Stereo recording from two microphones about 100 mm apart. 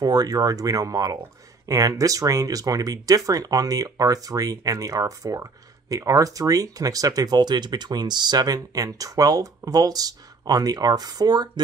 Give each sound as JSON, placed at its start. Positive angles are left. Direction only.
{"t": 0.0, "sound": "speech", "side_deg": -40}